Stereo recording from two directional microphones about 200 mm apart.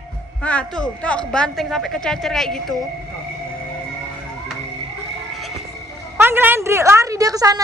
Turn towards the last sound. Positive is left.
turn(degrees=-20)  # may be behind; listen again after turning